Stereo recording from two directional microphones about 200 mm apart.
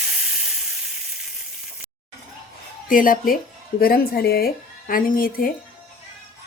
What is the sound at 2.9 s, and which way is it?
Speech, 45° left (ahead or behind).